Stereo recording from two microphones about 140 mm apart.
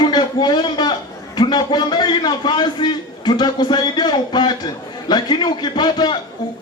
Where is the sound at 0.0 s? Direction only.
30° left (ahead or behind).